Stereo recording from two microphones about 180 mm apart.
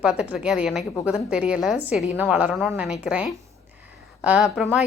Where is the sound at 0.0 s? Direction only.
5° right (ahead or behind).